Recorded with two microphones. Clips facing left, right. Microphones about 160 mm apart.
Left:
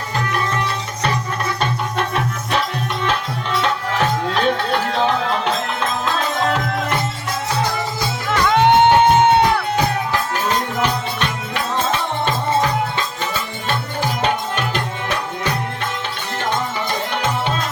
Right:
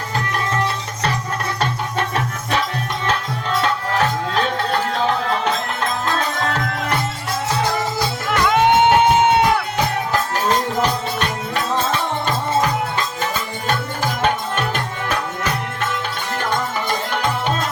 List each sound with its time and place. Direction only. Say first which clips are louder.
8.4 s music: left 2 dB; 10° right (ahead or behind)
14.2 s music: right 2 dB; 50° right (ahead or behind)